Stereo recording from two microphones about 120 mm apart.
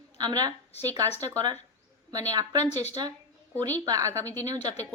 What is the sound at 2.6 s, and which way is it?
Speech, 65° left (ahead or behind).